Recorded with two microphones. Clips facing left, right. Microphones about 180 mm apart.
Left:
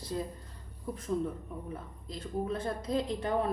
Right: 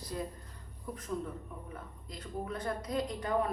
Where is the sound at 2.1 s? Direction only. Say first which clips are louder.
Left 5 dB; 25° left (ahead or behind).